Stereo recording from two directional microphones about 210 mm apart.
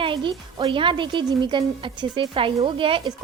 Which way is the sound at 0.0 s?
25° right (ahead or behind).